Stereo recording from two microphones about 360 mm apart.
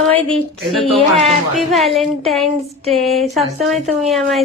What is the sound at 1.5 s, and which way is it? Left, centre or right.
Speech, centre.